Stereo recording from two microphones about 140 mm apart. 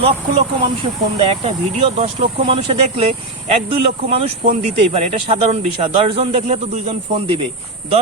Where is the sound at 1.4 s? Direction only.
45° right (ahead or behind).